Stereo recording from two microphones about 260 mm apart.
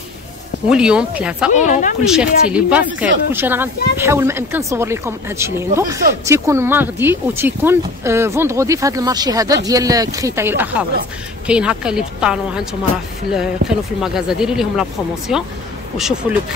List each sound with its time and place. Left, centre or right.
0.7 s speech: centre
1.5 s speech: left
2.0 s speech: centre